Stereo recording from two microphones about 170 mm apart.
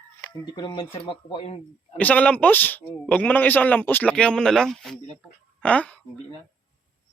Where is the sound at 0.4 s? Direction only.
25° left (ahead or behind).